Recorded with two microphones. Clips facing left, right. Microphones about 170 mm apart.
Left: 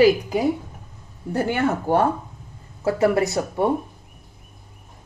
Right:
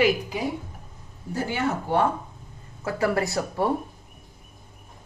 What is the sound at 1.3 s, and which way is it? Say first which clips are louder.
Speech: left 5 dB; 50° left (ahead or behind).